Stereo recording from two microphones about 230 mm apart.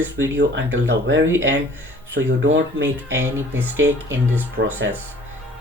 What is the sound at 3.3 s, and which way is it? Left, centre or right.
Speech, centre.